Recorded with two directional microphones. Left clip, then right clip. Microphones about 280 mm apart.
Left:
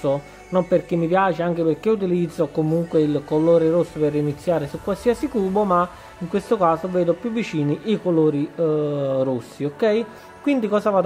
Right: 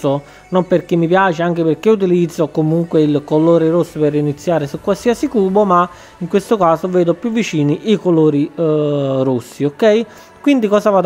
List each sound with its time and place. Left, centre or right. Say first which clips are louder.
0.0 s speech: right 5 dB; right